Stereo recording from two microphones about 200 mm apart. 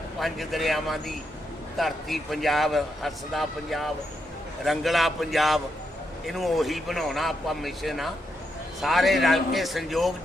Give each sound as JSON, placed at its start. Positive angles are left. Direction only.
{"t": 0.2, "sound": "a man's voice", "side_deg": 0}